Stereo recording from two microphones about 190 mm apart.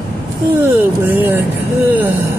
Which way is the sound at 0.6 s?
10° right (ahead or behind).